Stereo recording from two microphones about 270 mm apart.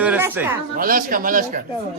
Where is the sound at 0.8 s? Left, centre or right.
Right.